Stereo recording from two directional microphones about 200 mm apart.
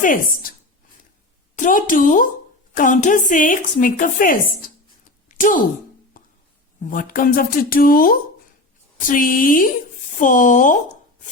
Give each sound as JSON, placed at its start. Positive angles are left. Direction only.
{"t": 0.0, "sound": "speech", "side_deg": 45}
{"t": 1.5, "sound": "a woman's voice", "side_deg": 40}
{"t": 6.9, "sound": "a woman's voice", "side_deg": 45}